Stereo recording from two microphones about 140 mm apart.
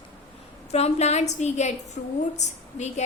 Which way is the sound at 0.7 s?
50° left (ahead or behind).